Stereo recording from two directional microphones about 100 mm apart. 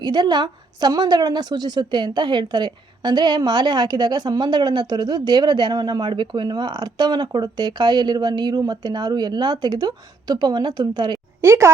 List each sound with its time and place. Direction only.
0.0 s a woman's voice: 45° right (ahead or behind)
11.3 s a woman's voice: 25° right (ahead or behind)